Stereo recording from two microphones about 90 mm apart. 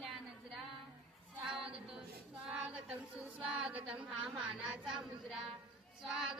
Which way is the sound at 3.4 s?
15° right (ahead or behind).